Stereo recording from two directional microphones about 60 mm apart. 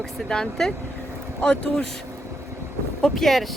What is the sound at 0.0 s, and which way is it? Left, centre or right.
Speech, centre.